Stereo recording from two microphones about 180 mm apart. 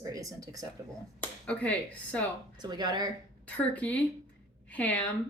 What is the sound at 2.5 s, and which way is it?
Speech, 25° right (ahead or behind).